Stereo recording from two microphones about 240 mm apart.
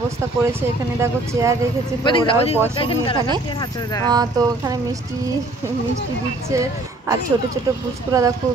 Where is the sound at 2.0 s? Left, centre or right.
Left.